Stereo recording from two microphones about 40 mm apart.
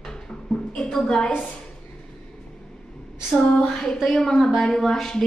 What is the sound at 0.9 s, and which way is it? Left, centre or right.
Speech, centre.